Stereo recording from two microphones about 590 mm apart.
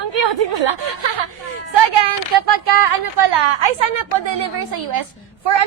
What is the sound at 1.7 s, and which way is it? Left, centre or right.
A woman's voice, right.